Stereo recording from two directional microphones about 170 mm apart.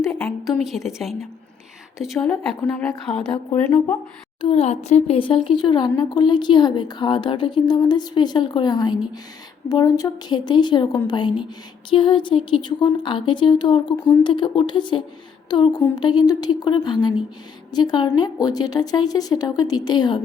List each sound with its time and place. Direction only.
0.1 s a sound: 5° left (ahead or behind)
0.6 s a woman's voice: centre (ahead or behind)
3.5 s speech: 15° left (ahead or behind)
4.4 s speech: 35° left (ahead or behind)